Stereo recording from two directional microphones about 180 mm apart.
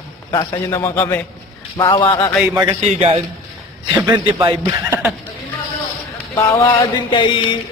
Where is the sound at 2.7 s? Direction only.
35° right (ahead or behind).